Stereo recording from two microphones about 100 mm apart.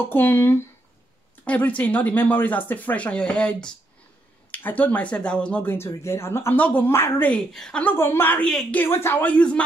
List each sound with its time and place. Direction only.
0.0 s a woman's voice: 20° left (ahead or behind)
7.5 s speech: 5° left (ahead or behind)
7.8 s a woman's voice: 20° left (ahead or behind)